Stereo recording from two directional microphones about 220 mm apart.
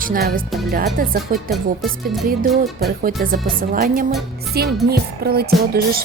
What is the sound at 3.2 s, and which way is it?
Speech, 40° right (ahead or behind).